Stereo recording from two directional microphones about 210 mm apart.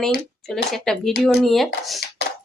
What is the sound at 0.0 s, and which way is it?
Speech, centre (ahead or behind).